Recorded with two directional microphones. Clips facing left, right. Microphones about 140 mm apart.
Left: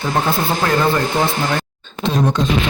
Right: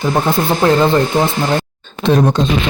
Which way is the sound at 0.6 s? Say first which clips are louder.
Right 7 dB; 25° right (ahead or behind).